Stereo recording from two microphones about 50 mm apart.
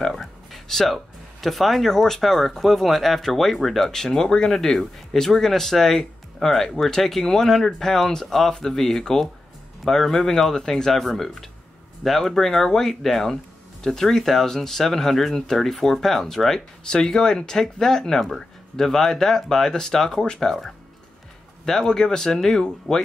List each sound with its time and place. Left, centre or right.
0.0 s a sound: centre
0.9 s speech: centre
21.6 s speech: centre